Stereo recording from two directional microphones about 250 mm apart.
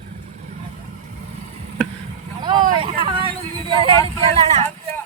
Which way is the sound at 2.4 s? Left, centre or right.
Centre.